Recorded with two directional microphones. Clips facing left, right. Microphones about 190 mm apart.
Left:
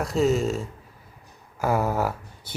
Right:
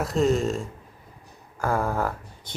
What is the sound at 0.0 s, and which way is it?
Speech, centre (ahead or behind).